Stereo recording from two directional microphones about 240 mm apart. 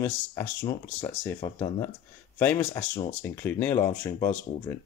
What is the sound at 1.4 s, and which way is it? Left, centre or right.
Speech, left.